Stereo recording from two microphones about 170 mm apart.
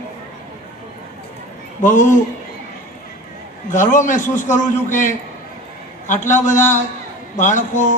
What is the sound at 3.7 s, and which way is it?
A man's voice, 50° left (ahead or behind).